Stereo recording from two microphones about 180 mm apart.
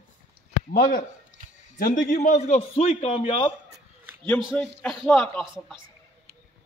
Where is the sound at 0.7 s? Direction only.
55° left (ahead or behind); by 3.4 s 30° left (ahead or behind).